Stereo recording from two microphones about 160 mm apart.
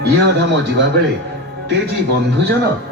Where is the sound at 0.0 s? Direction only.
90° right.